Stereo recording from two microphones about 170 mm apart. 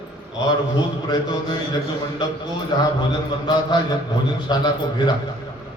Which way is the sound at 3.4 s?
25° left (ahead or behind).